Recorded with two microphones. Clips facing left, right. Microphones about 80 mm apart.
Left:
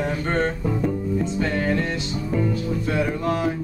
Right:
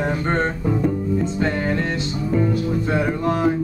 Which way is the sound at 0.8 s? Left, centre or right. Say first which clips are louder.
Right 2 dB; centre.